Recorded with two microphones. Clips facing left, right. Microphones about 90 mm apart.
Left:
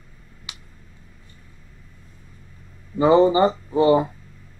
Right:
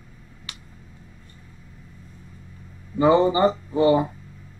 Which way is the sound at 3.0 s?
30° left (ahead or behind).